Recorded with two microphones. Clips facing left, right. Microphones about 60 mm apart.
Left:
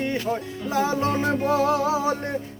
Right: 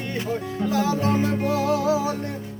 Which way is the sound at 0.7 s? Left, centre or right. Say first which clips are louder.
Even; left.